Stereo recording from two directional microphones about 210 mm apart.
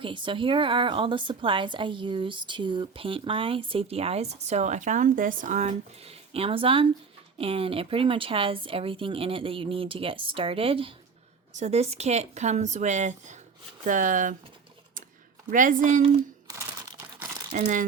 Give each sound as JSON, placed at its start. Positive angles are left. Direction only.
{"t": 0.0, "sound": "a woman's voice", "side_deg": -25}
{"t": 15.4, "sound": "speech", "side_deg": -40}
{"t": 17.5, "sound": "speech", "side_deg": -40}